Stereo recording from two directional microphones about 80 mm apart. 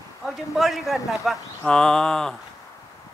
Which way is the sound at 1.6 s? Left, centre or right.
Centre.